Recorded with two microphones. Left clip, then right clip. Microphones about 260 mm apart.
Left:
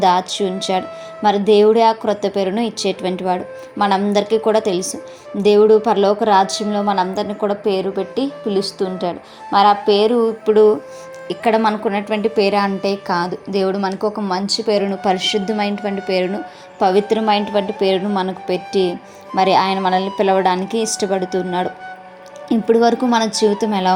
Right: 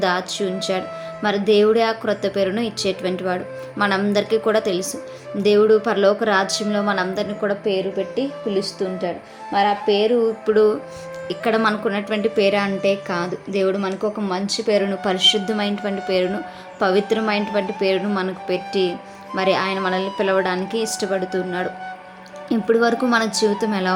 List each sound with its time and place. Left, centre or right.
0.0 s a woman's voice: centre
8.1 s speech: left
10.4 s a woman's voice: centre